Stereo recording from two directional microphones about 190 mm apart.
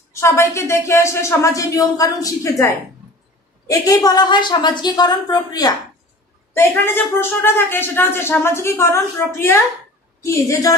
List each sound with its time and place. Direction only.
0.1 s a woman's voice: 15° left (ahead or behind)